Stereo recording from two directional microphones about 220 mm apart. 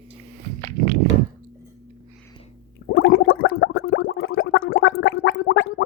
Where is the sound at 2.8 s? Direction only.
60° left (ahead or behind).